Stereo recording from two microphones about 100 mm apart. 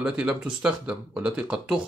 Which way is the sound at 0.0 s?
10° right (ahead or behind).